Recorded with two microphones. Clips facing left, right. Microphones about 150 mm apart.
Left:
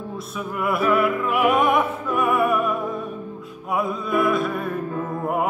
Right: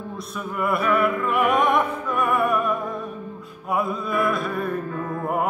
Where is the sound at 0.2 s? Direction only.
Centre (ahead or behind).